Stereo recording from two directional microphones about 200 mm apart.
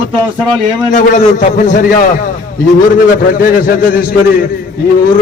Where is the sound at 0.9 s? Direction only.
40° left (ahead or behind).